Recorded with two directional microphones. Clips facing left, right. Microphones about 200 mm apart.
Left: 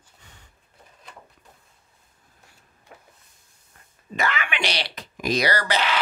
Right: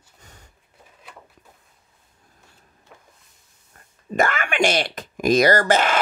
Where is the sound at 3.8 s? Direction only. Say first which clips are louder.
Right 3 dB; 45° right (ahead or behind).